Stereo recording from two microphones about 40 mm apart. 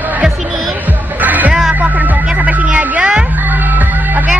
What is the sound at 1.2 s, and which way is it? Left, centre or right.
Music, right.